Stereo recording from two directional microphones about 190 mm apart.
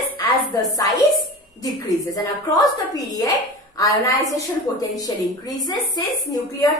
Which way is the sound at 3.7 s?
15° left (ahead or behind).